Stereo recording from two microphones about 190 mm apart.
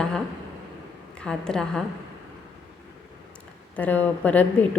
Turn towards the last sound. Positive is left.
turn(degrees=10)  # may be behind; listen again after turning